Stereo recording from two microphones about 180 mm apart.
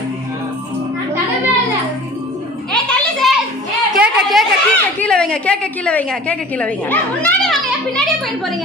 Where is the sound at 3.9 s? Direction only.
Centre (ahead or behind).